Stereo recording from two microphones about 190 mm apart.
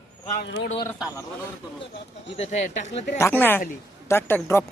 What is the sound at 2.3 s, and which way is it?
Speech, 35° left (ahead or behind).